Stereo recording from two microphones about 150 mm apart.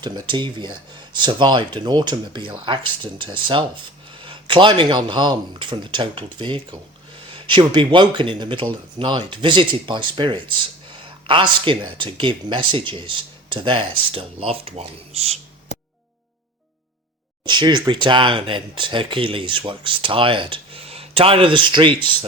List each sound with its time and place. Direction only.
0.0 s speech: 30° right (ahead or behind)
17.4 s speech: 30° right (ahead or behind)